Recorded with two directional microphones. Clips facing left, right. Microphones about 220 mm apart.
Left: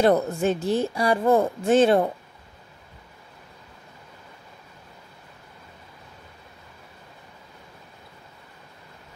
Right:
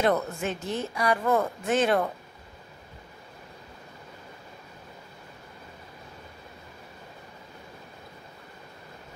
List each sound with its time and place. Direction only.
0.0 s speech: 35° left (ahead or behind)